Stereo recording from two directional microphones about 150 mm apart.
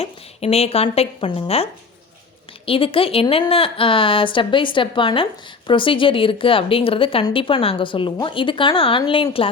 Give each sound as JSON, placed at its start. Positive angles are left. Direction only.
{"t": 0.0, "sound": "a woman's voice", "side_deg": 45}
{"t": 2.6, "sound": "a woman's voice", "side_deg": 35}